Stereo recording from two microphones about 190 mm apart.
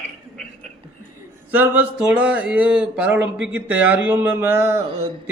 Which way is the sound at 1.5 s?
10° right (ahead or behind).